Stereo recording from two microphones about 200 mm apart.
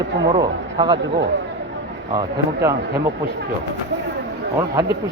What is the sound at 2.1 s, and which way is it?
Speech, 20° right (ahead or behind).